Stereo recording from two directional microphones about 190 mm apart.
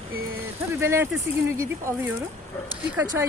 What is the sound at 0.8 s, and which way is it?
Speech, 15° right (ahead or behind).